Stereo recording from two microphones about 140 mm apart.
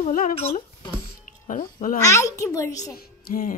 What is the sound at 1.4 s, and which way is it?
Speech, 75° left (ahead or behind).